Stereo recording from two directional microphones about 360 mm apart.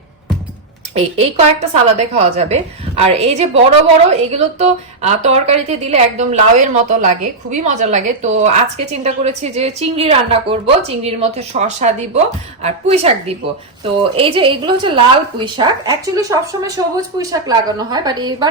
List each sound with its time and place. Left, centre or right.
0.9 s a woman's voice: centre